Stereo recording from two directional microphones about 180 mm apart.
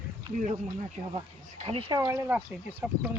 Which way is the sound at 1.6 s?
30° right (ahead or behind).